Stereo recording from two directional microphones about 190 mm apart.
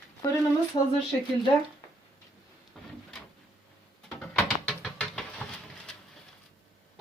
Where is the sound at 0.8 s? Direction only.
30° left (ahead or behind).